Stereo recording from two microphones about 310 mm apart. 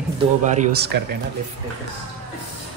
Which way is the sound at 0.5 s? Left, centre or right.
Right.